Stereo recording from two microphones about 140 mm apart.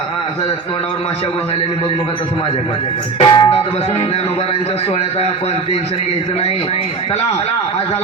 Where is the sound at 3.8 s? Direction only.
50° left (ahead or behind).